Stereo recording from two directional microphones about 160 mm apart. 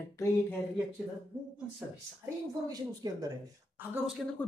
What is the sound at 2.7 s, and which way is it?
Speech, 25° right (ahead or behind).